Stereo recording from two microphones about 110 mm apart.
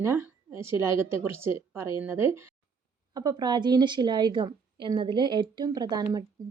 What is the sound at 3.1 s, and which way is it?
A woman's voice, 35° right (ahead or behind).